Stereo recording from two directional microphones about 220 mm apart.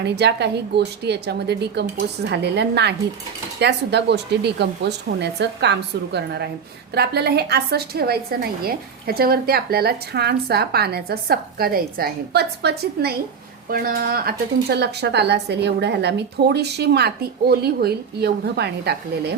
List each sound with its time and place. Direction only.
0.0 s a woman's voice: 50° right (ahead or behind)